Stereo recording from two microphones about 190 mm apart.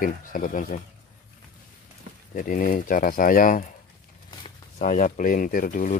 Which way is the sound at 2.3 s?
45° left (ahead or behind).